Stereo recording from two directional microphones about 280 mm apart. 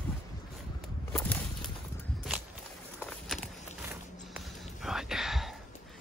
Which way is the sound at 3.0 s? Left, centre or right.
Centre.